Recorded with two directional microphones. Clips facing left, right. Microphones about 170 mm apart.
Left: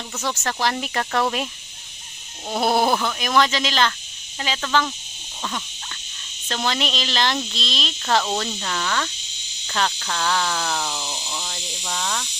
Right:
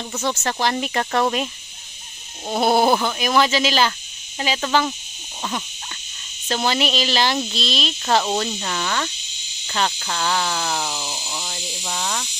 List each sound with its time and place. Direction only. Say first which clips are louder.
0.2 s speech: right 2 dB; centre (ahead or behind)
4.4 s speech: right 2 dB; 20° right (ahead or behind)
6.5 s speech: right 4 dB; 5° right (ahead or behind)